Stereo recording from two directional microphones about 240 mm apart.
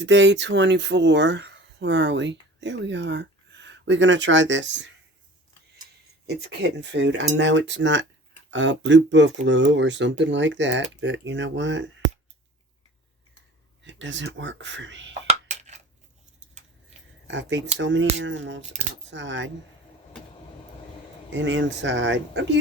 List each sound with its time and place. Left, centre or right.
0.0 s speech: right
6.2 s cutlery: right
13.8 s cutlery: right
15.4 s a sound: right
17.2 s speech: right
17.7 s cutlery: right
18.6 s speech: right
19.1 s cutlery: right
21.3 s cutlery: right